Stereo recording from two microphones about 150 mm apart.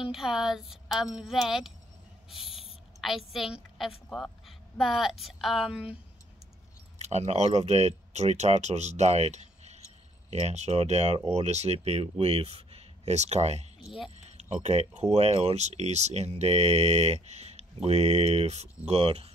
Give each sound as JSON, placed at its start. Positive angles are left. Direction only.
{"t": 0.0, "sound": "a woman's voice", "side_deg": -5}
{"t": 2.3, "sound": "owl", "side_deg": 0}
{"t": 3.0, "sound": "a woman's voice", "side_deg": 0}
{"t": 7.0, "sound": "speech", "side_deg": -45}